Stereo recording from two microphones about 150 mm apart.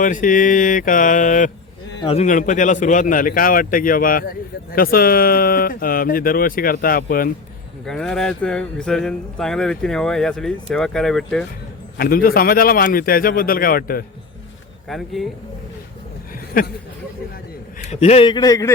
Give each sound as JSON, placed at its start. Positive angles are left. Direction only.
{"t": 0.0, "sound": "mantra", "side_deg": 60}
{"t": 2.0, "sound": "speech", "side_deg": 40}
{"t": 2.2, "sound": "speech", "side_deg": 55}
{"t": 7.9, "sound": "speech", "side_deg": 5}
{"t": 11.9, "sound": "speech", "side_deg": 80}
{"t": 14.8, "sound": "speech", "side_deg": 0}
{"t": 17.8, "sound": "a man's voice", "side_deg": 45}
{"t": 18.3, "sound": "a man's voice", "side_deg": 25}